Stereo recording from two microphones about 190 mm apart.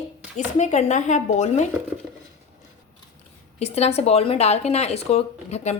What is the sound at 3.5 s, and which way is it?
Speech, 35° left (ahead or behind).